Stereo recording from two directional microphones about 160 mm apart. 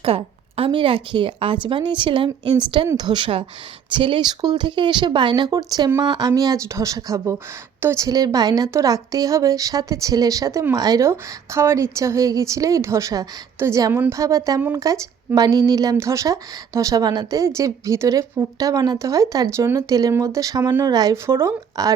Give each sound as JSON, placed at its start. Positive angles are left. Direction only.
{"t": 0.0, "sound": "a woman's voice", "side_deg": -35}